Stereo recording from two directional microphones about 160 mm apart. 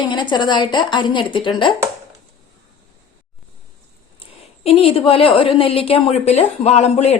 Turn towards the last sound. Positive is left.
turn(degrees=45)  # may be behind; listen again after turning